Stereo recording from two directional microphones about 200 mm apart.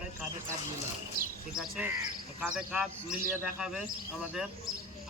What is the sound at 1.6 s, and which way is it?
Speech, 5° right (ahead or behind).